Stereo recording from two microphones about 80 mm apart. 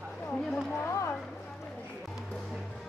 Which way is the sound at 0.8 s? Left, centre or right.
Left.